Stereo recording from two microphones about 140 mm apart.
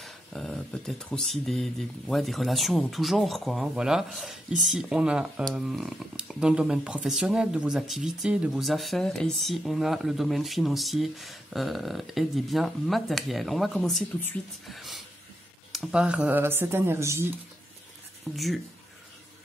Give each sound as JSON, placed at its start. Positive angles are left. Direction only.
{"t": 0.0, "sound": "speech", "side_deg": 5}
{"t": 14.7, "sound": "a sound", "side_deg": 0}
{"t": 15.7, "sound": "speech", "side_deg": -5}
{"t": 18.3, "sound": "speech", "side_deg": 0}